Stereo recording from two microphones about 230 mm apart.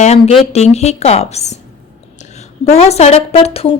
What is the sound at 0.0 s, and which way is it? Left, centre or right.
A woman's voice, left.